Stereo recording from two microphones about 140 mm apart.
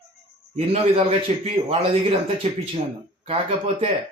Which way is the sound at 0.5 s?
45° right (ahead or behind).